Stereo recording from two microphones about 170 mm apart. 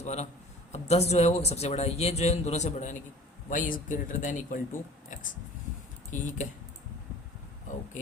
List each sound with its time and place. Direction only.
0.0 s a man's voice: 40° left (ahead or behind)
6.1 s speech: 50° left (ahead or behind)